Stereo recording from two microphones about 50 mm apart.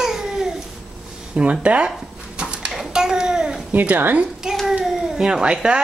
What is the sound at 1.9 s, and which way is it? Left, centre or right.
Dog, centre.